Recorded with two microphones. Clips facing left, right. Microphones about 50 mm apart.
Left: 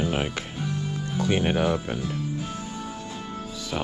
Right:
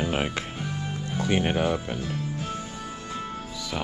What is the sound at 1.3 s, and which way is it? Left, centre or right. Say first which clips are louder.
Speech: left 1 dB; right.